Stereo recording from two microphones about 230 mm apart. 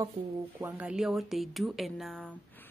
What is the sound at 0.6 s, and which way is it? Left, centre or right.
A woman's voice, centre.